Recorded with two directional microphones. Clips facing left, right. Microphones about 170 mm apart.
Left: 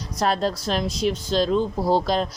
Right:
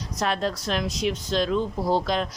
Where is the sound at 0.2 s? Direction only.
35° left (ahead or behind).